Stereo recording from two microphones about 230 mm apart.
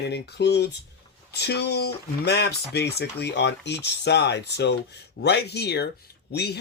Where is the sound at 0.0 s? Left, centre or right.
Left.